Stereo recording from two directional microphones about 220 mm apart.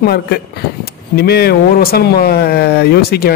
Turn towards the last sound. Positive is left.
turn(degrees=45)  # may be behind; listen again after turning